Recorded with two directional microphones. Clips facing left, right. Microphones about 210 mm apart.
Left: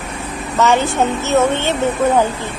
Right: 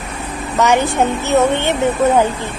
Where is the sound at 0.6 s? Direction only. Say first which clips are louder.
Right 1 dB; 15° right (ahead or behind).